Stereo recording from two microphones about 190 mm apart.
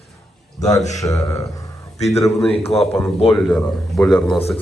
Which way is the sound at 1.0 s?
15° left (ahead or behind).